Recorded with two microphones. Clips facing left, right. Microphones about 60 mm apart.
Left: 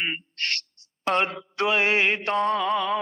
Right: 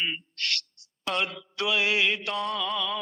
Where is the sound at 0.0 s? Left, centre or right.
Left.